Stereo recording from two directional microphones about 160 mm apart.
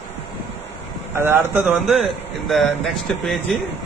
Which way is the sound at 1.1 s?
15° right (ahead or behind).